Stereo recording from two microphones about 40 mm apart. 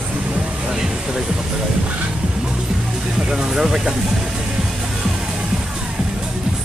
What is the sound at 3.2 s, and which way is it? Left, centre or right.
Speech, centre.